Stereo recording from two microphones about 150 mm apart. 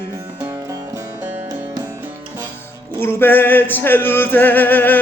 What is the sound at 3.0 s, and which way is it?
Male singing, 15° left (ahead or behind).